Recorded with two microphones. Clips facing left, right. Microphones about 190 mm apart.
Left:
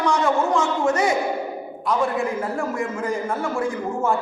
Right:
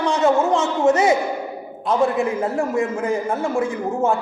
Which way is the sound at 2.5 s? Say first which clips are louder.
Right 4 dB; 20° right (ahead or behind).